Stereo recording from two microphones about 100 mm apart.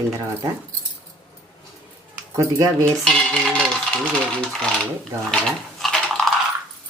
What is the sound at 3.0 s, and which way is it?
Speech, 5° left (ahead or behind).